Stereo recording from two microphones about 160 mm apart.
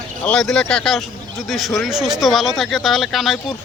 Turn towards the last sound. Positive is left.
turn(degrees=0)  # may be behind; listen again after turning